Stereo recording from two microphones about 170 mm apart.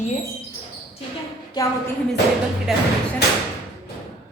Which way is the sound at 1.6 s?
25° left (ahead or behind).